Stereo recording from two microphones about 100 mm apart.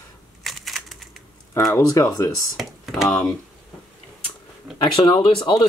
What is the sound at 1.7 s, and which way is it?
Speech, 30° left (ahead or behind).